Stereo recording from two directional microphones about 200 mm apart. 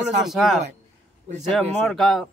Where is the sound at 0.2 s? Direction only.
Centre (ahead or behind).